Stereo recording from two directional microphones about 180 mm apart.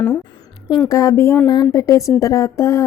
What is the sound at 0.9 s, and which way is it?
Speech, 20° left (ahead or behind).